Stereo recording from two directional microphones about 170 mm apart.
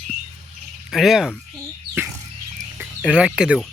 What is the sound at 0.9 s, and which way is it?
Speech, centre (ahead or behind).